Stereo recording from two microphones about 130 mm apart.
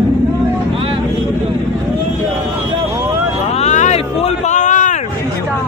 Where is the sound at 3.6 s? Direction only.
60° left (ahead or behind).